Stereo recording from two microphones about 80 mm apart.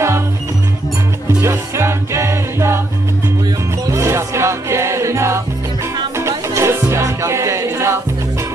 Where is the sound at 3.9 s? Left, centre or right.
Right.